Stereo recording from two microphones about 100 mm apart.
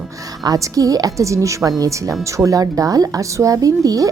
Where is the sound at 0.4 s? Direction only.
35° right (ahead or behind).